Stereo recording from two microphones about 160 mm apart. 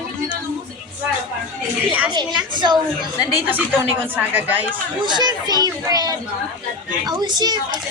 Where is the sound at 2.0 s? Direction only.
30° right (ahead or behind).